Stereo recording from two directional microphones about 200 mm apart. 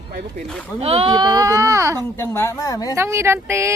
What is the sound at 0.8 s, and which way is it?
Speech, 30° right (ahead or behind).